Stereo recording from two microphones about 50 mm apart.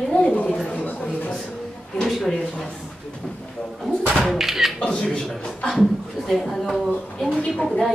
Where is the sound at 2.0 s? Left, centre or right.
Centre.